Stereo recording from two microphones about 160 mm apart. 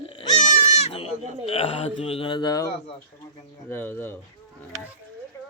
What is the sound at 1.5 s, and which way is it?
Speech, 40° left (ahead or behind).